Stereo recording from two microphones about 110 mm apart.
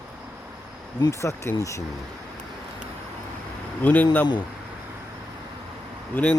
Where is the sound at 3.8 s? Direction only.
15° left (ahead or behind).